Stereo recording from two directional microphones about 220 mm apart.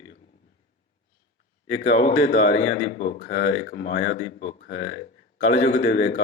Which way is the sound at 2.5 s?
50° left (ahead or behind).